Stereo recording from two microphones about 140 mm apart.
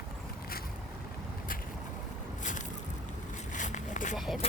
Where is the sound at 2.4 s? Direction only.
65° left (ahead or behind).